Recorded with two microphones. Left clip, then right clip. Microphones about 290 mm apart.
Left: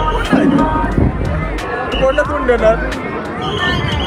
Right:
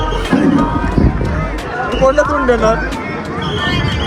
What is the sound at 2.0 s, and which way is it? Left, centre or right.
Speech, right.